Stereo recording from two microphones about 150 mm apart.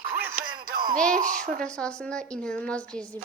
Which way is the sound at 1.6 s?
5° left (ahead or behind).